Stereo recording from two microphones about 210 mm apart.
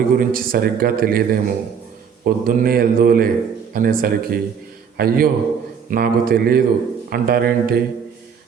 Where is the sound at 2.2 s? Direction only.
45° right (ahead or behind).